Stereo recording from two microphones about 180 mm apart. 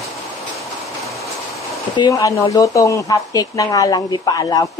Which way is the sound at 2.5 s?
20° left (ahead or behind).